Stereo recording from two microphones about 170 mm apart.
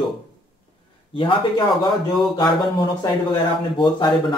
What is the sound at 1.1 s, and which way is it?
Speech, 30° left (ahead or behind).